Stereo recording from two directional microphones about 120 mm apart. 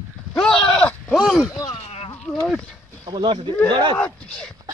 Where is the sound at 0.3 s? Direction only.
5° left (ahead or behind).